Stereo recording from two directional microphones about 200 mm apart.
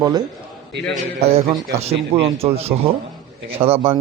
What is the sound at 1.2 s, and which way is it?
A man's voice, 30° right (ahead or behind).